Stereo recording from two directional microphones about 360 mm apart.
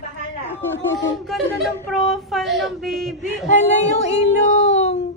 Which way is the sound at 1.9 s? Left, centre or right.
Centre.